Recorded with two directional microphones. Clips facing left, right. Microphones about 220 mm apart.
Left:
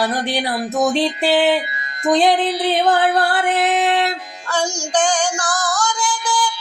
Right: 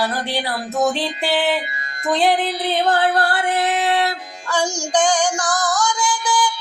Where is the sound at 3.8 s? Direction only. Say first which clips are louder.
Left 2 dB; 20° left (ahead or behind).